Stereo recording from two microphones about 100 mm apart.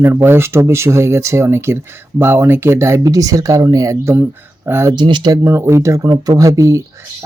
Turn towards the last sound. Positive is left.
turn(degrees=-35)  # may be behind; listen again after turning